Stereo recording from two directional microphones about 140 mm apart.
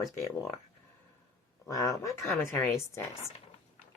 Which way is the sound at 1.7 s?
25° left (ahead or behind).